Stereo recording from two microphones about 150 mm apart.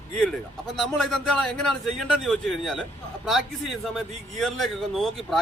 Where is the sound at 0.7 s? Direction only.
Centre (ahead or behind).